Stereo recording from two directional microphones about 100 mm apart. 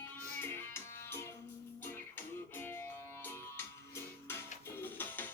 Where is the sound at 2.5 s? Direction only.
25° left (ahead or behind).